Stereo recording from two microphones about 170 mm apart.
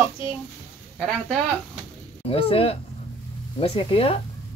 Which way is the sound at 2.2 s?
35° left (ahead or behind).